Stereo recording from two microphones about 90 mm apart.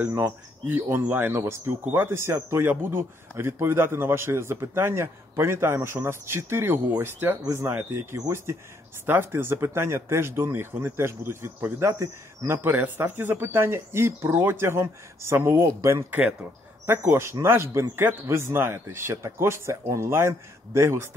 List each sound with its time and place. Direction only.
0.2 s speech: 25° right (ahead or behind)
16.1 s speech: 20° right (ahead or behind)